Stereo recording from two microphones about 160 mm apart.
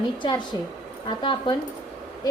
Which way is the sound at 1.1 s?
30° left (ahead or behind).